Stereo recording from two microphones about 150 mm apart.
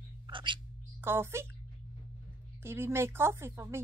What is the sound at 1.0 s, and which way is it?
Speech, 15° right (ahead or behind).